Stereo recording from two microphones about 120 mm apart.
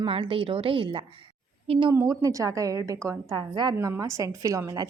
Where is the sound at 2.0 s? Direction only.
25° right (ahead or behind).